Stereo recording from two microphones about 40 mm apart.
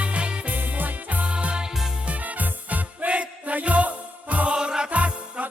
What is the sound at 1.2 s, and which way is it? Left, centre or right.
Music, right.